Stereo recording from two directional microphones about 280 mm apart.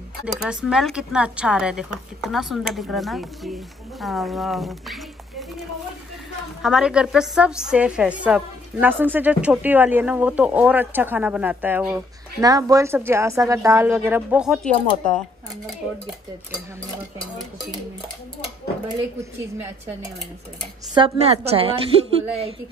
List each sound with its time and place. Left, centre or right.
0.2 s a woman's voice: centre
6.6 s a woman's voice: centre
20.9 s a woman's voice: centre